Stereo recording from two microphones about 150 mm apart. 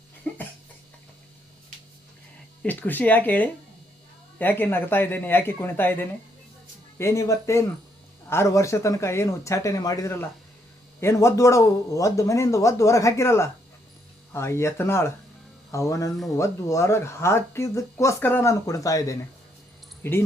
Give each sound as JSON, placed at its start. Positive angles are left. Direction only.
{"t": 0.3, "sound": "cough", "side_deg": 10}
{"t": 2.6, "sound": "speech", "side_deg": 10}